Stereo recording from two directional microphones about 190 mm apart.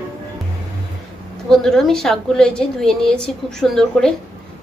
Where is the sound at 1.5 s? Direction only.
Centre (ahead or behind).